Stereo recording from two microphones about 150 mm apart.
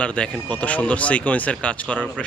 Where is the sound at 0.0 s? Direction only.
10° left (ahead or behind).